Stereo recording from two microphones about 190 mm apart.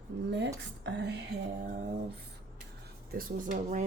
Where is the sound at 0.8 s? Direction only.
65° right (ahead or behind).